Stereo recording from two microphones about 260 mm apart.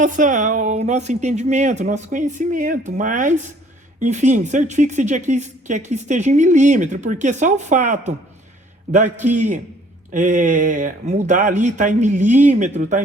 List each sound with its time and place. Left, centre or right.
0.0 s a woman's voice: right